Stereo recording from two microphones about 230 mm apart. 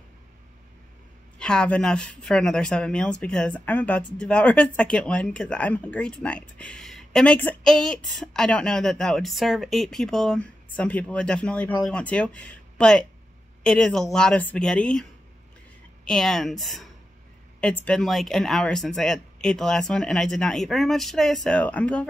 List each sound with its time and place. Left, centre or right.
1.4 s speech: centre
16.1 s speech: centre